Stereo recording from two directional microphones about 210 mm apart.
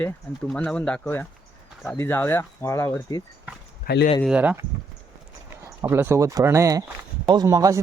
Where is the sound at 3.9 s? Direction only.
45° left (ahead or behind).